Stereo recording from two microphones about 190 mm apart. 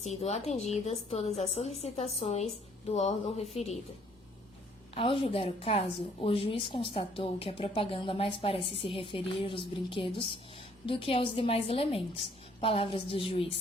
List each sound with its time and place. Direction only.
0.0 s a woman's voice: 35° left (ahead or behind)
4.9 s a woman's voice: 30° left (ahead or behind)